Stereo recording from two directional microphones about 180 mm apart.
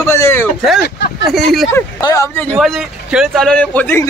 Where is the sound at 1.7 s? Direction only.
15° left (ahead or behind).